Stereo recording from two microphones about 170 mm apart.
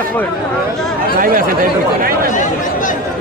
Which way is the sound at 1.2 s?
55° right (ahead or behind).